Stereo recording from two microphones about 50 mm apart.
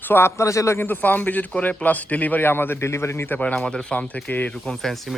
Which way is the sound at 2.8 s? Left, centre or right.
Left.